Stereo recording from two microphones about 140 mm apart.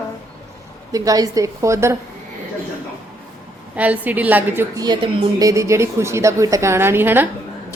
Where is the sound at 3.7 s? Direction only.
10° right (ahead or behind).